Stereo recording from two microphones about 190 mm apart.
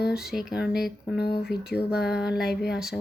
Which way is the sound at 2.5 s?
60° left (ahead or behind).